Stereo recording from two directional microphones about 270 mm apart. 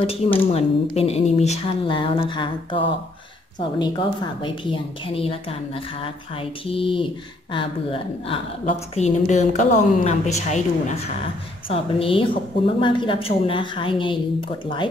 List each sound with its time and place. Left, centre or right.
0.5 s a woman's voice: left
6.6 s a woman's voice: centre